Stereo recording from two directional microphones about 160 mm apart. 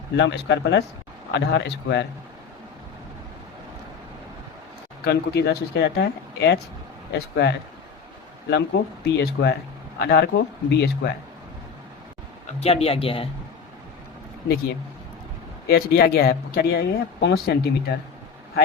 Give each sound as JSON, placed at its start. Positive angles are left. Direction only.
{"t": 0.2, "sound": "speech", "side_deg": 90}
{"t": 5.0, "sound": "speech", "side_deg": 85}
{"t": 12.5, "sound": "speech", "side_deg": 40}
{"t": 15.6, "sound": "speech", "side_deg": 75}